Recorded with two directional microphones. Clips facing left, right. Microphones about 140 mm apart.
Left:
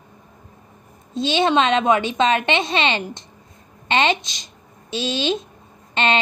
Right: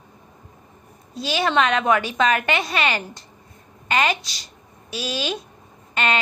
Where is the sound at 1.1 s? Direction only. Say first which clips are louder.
Left 3 dB; 25° left (ahead or behind).